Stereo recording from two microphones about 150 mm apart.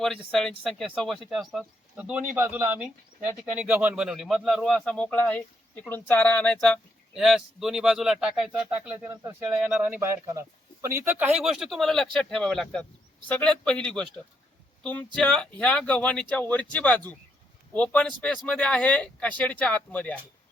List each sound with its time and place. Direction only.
0.0 s speech: 5° left (ahead or behind)
9.0 s speech: 20° right (ahead or behind)
9.6 s speech: 5° right (ahead or behind)